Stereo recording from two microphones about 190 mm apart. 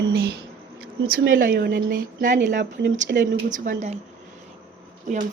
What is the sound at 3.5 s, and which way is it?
Speech, 45° right (ahead or behind).